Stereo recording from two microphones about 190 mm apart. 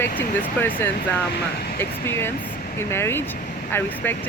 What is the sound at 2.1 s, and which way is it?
Speech, 10° left (ahead or behind).